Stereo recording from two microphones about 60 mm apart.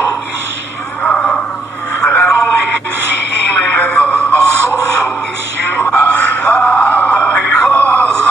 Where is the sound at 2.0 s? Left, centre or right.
Left.